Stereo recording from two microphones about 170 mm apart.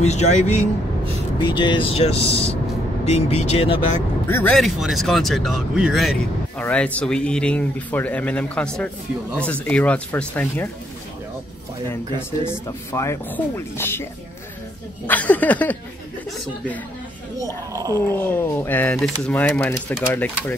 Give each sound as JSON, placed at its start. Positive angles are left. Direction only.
{"t": 0.0, "sound": "speech", "side_deg": 40}
{"t": 1.4, "sound": "speech", "side_deg": 25}
{"t": 4.3, "sound": "speech", "side_deg": 15}
{"t": 4.6, "sound": "speech", "side_deg": 0}
{"t": 12.4, "sound": "speech", "side_deg": 15}
{"t": 15.0, "sound": "speech", "side_deg": 10}
{"t": 17.4, "sound": "speech", "side_deg": -20}
{"t": 18.1, "sound": "speech", "side_deg": 10}